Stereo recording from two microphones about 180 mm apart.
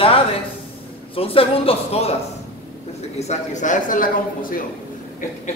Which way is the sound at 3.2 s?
40° left (ahead or behind).